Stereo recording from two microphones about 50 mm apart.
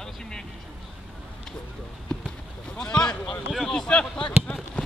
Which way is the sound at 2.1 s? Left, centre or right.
Left.